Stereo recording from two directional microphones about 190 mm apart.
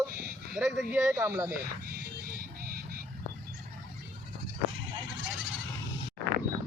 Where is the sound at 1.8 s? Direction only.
50° right (ahead or behind).